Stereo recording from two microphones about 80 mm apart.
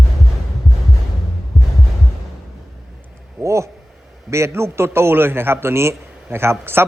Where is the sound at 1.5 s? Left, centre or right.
Centre.